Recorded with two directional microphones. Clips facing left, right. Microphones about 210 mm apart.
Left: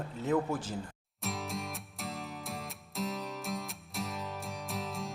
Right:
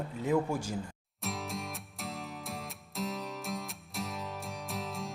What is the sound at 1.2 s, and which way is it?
Music, centre (ahead or behind).